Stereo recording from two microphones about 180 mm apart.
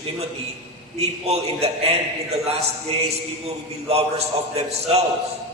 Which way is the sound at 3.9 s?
35° right (ahead or behind).